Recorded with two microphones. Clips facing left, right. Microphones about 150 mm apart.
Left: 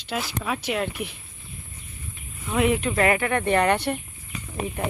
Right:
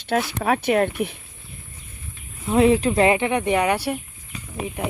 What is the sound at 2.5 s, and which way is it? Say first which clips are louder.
Speech: right 6 dB; 30° right (ahead or behind).